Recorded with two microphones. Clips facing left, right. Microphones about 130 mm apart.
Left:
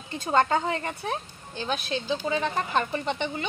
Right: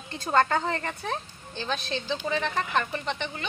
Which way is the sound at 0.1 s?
15° left (ahead or behind).